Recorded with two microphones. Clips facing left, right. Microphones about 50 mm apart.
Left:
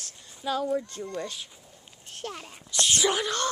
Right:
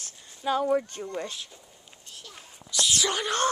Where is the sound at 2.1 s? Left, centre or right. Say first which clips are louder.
Left 10 dB; left.